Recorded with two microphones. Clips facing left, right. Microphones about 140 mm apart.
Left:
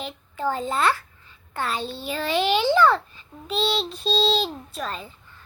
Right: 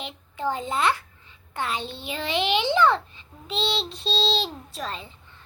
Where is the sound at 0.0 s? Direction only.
20° right (ahead or behind).